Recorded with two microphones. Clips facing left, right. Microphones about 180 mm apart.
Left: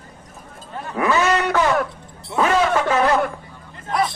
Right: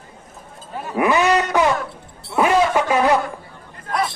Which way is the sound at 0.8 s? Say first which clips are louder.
Right 2 dB; 15° right (ahead or behind).